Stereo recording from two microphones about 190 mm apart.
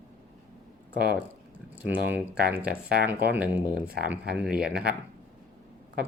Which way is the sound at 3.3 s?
10° right (ahead or behind).